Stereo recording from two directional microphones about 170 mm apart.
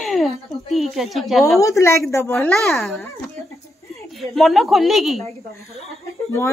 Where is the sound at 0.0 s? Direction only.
Centre (ahead or behind).